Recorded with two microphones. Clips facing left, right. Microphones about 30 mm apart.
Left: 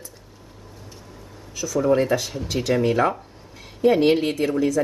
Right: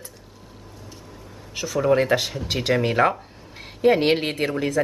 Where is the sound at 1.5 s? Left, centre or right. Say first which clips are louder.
Even; right.